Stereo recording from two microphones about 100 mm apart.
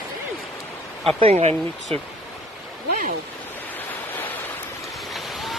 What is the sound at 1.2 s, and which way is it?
Speech, 90° right.